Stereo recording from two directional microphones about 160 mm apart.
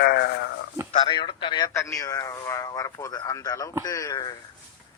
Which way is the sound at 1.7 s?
20° left (ahead or behind).